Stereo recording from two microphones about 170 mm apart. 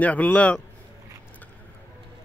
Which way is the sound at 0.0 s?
10° left (ahead or behind).